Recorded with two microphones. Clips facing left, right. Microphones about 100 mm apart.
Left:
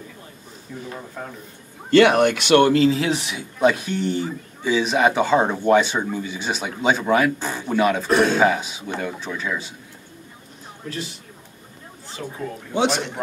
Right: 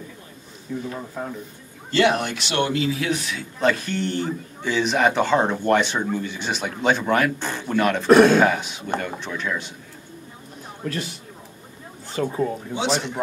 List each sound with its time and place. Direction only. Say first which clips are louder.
0.7 s speech: right 4 dB; centre (ahead or behind)
1.9 s speech: left 6 dB; 60° left (ahead or behind)
2.8 s speech: left 5 dB; 30° left (ahead or behind)
3.5 s speech: left 3 dB; 10° left (ahead or behind)
8.1 s speech: right 9 dB; 60° right (ahead or behind)
8.4 s speech: even; 5° left (ahead or behind)
12.2 s speech: right 8 dB; 50° right (ahead or behind)
12.7 s speech: left 5 dB; 55° left (ahead or behind)